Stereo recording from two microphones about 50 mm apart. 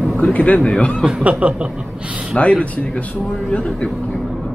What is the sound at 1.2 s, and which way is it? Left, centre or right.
Speech, right.